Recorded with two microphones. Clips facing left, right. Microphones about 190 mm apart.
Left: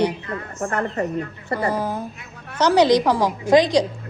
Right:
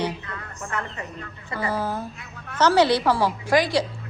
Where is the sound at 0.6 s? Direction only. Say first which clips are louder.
Left 9 dB; 50° left (ahead or behind).